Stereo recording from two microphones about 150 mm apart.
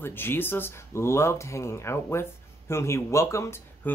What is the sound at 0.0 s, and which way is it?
Speech, 15° left (ahead or behind).